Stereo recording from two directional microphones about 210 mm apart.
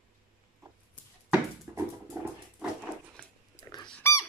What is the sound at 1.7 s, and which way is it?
Dog, 10° right (ahead or behind).